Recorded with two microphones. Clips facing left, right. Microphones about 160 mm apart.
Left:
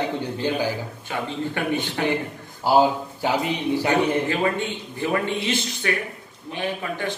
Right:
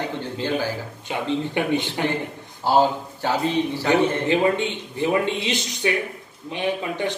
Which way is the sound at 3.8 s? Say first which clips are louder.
Right 2 dB; 20° right (ahead or behind).